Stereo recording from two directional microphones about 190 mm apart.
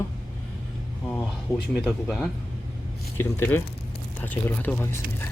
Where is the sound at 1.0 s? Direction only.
Centre (ahead or behind).